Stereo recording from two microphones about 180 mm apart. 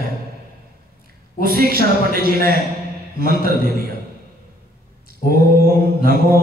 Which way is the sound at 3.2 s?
55° right (ahead or behind).